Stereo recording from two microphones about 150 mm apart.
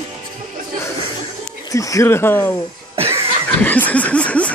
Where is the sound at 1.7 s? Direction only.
20° left (ahead or behind).